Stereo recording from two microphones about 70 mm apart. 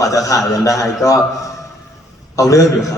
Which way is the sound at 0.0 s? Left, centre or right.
Left.